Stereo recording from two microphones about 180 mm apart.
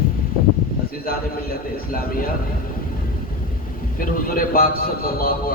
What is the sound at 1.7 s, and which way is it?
Speech, 55° left (ahead or behind).